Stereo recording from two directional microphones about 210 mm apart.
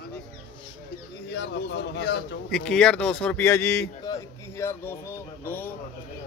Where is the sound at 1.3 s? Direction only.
55° left (ahead or behind).